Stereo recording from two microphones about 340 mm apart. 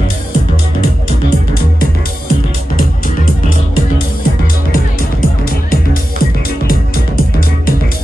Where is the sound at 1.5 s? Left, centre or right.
Left.